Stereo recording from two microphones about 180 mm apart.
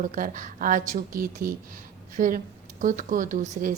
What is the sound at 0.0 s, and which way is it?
A woman's voice, 45° right (ahead or behind).